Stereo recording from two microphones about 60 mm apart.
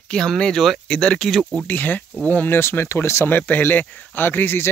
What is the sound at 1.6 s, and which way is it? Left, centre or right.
Speech, left.